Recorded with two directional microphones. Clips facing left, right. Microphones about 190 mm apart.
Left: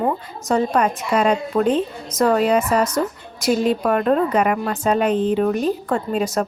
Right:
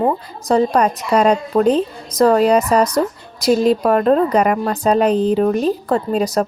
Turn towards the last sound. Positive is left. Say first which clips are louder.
# right 4 dB
turn(degrees=-35)  # may be behind; listen again after turning